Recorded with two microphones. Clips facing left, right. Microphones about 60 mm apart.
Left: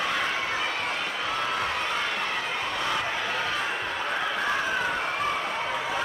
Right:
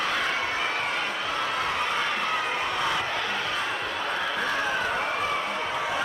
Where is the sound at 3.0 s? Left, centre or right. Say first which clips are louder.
Even; centre.